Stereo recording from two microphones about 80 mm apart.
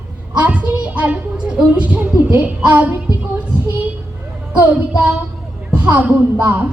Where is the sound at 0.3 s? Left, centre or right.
Centre.